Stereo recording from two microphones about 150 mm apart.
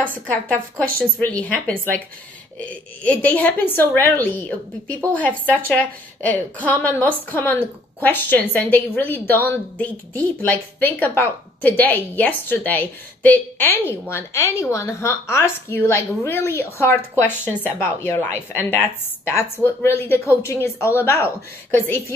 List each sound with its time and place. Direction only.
0.3 s a woman's voice: 10° left (ahead or behind)